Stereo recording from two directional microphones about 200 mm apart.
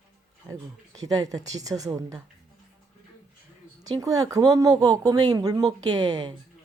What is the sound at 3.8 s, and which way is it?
Speech, 20° right (ahead or behind).